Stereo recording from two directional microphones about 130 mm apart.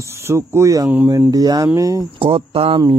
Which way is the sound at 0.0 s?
20° right (ahead or behind).